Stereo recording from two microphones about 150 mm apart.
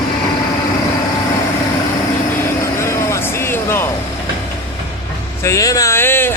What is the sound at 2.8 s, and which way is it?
Vehicle, 20° left (ahead or behind).